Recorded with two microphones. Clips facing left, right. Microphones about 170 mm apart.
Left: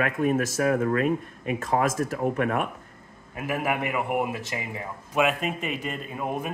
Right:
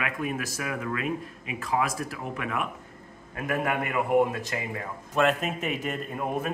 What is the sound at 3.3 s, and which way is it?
A man's voice, 10° left (ahead or behind).